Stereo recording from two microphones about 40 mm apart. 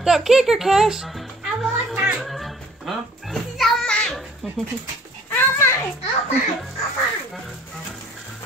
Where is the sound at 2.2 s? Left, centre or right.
Centre.